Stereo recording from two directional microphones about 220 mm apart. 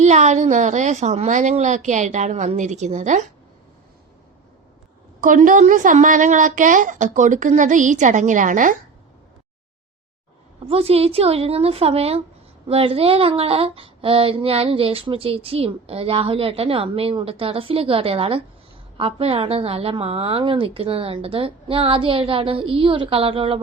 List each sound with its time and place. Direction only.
0.0 s a woman's voice: 30° right (ahead or behind)
5.2 s a woman's voice: 35° right (ahead or behind)
10.7 s a sound: 25° right (ahead or behind)